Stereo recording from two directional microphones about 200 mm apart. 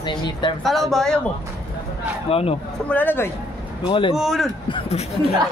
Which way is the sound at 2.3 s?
30° left (ahead or behind).